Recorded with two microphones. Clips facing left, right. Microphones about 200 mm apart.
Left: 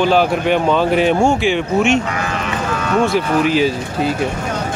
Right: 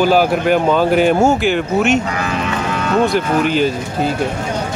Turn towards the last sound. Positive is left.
turn(degrees=0)  # may be behind; listen again after turning